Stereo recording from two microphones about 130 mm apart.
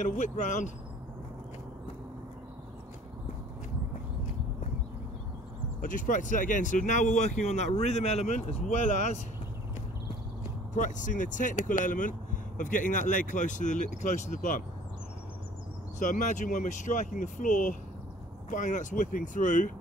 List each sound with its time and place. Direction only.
0.0 s speech: 70° left (ahead or behind)
5.8 s speech: 90° left; by 9.2 s 70° left (ahead or behind)
10.7 s speech: 75° left (ahead or behind)
16.0 s speech: 80° left
18.5 s speech: 75° left (ahead or behind)